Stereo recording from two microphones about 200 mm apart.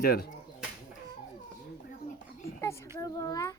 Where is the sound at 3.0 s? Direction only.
15° left (ahead or behind).